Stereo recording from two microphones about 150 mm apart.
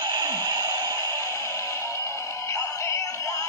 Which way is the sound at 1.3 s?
20° left (ahead or behind).